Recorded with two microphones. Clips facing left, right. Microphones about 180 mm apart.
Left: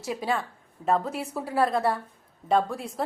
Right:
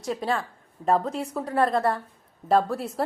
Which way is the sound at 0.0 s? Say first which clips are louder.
Right 1 dB; 5° left (ahead or behind).